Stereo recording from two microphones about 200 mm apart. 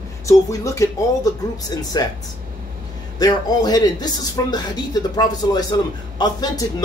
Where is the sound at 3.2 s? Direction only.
20° left (ahead or behind).